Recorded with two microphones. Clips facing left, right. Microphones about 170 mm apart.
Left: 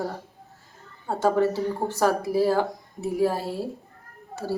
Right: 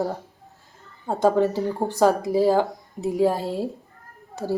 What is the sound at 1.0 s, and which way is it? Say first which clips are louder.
Speech: right 2 dB; 15° right (ahead or behind).